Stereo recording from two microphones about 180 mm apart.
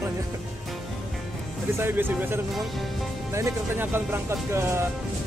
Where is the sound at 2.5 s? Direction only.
Centre (ahead or behind).